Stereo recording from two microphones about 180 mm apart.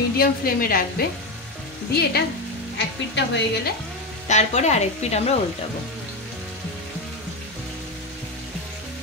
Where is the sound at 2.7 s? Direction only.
75° left (ahead or behind).